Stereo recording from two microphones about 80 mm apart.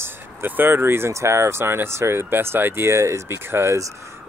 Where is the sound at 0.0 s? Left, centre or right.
Right.